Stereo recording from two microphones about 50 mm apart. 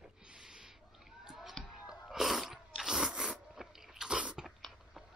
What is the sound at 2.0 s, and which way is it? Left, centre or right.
Sneeze, centre.